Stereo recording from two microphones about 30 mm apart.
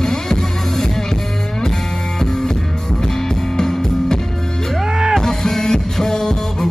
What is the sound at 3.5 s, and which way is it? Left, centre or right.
Music, centre.